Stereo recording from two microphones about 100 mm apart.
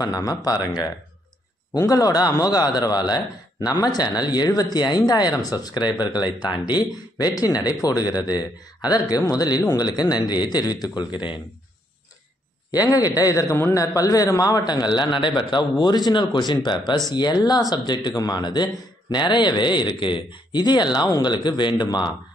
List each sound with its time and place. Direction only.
0.0 s speech: 40° left (ahead or behind)
1.9 s speech: 35° left (ahead or behind)
12.7 s speech: 40° left (ahead or behind)